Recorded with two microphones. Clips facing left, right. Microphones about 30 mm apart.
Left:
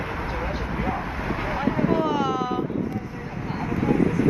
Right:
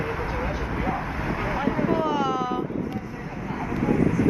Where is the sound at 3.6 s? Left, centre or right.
Centre.